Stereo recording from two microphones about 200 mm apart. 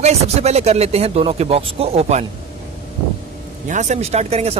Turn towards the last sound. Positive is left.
turn(degrees=-30)  # may be behind; listen again after turning